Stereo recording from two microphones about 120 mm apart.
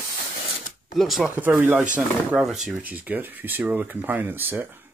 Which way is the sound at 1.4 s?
20° right (ahead or behind).